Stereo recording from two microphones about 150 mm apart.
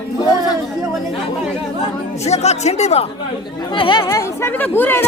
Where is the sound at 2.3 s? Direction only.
45° left (ahead or behind).